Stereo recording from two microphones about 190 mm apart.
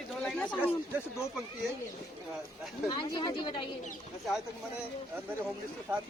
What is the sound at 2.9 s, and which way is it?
Speech, 25° left (ahead or behind).